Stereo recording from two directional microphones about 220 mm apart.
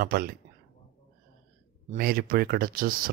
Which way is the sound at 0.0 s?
45° right (ahead or behind).